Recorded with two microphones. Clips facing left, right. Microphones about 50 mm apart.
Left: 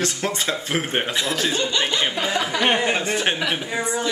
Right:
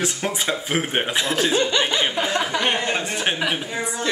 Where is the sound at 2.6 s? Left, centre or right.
Centre.